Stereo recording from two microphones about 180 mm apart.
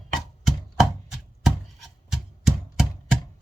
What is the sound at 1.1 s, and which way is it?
Chopping, centre (ahead or behind).